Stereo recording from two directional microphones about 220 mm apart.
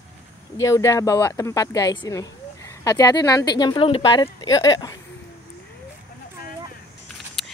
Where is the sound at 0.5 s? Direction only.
15° left (ahead or behind).